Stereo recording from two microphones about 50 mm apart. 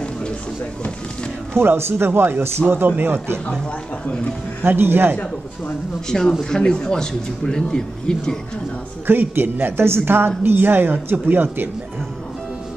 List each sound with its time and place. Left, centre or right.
1.6 s speech: right
4.6 s speech: right
6.0 s speech: centre
9.0 s speech: right